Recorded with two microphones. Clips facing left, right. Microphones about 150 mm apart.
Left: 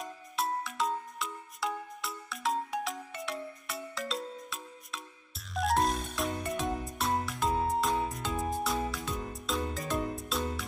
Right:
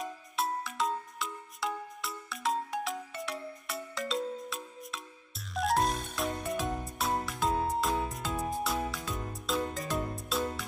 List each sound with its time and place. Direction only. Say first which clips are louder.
0.0 s music: right 1 dB; centre (ahead or behind)
5.5 s music: even; centre (ahead or behind)